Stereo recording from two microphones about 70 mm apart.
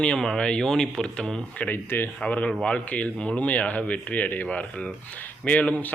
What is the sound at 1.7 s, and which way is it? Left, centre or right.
A man's voice, left.